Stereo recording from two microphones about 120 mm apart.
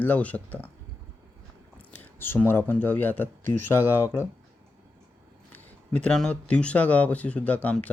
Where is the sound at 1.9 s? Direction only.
15° left (ahead or behind).